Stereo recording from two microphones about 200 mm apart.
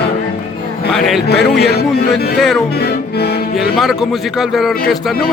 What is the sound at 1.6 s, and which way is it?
Music, 55° left (ahead or behind).